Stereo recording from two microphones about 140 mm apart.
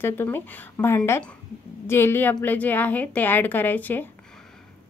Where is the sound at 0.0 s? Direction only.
15° left (ahead or behind).